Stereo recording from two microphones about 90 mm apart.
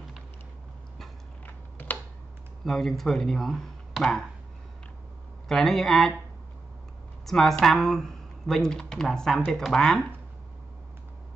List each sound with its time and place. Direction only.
1.4 s typing: 20° left (ahead or behind)
2.6 s speech: 5° left (ahead or behind)
5.5 s speech: 5° left (ahead or behind)
7.2 s speech: 5° left (ahead or behind)